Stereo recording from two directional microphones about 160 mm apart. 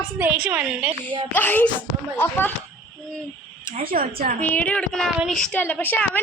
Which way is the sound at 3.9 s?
55° right (ahead or behind).